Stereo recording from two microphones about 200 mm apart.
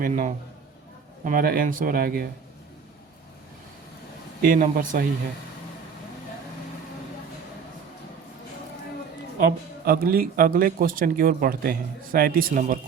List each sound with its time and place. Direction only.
0.0 s a man's voice: 40° right (ahead or behind)
4.4 s speech: 40° right (ahead or behind)
9.4 s speech: 50° right (ahead or behind)